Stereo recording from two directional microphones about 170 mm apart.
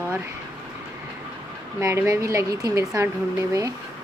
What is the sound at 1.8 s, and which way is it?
Speech, 20° right (ahead or behind).